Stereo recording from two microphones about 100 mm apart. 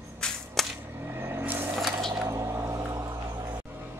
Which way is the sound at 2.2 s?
30° right (ahead or behind).